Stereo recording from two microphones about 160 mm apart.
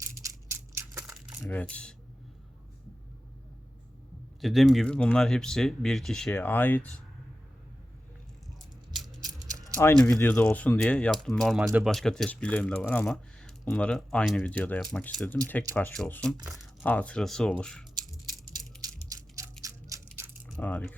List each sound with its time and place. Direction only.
0.0 s crushing: 20° right (ahead or behind)
1.4 s speech: 10° left (ahead or behind)
4.4 s speech: centre (ahead or behind)
9.2 s a sound: 20° right (ahead or behind)
9.7 s speech: 10° left (ahead or behind)
18.8 s a sound: 20° right (ahead or behind)
20.6 s speech: 10° left (ahead or behind)